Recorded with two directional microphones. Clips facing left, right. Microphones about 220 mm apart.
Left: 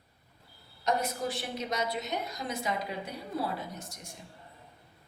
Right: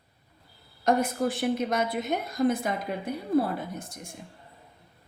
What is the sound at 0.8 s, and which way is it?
A woman's voice, 50° right (ahead or behind).